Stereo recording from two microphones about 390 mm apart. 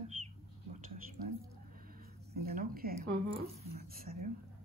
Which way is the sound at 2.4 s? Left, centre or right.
Right.